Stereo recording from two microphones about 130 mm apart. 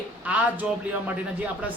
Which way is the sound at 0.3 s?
10° right (ahead or behind).